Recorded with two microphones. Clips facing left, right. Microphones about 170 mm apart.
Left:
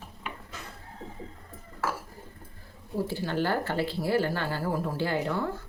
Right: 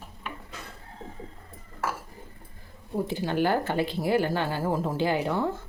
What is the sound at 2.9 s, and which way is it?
Speech, 20° right (ahead or behind).